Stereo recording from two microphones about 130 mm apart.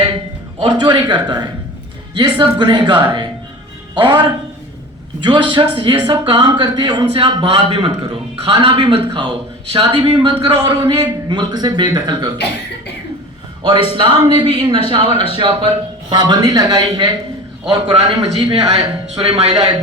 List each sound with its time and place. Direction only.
0.6 s a man's voice: 35° right (ahead or behind)
13.6 s a man's voice: 40° right (ahead or behind)
19.0 s speech: 55° right (ahead or behind)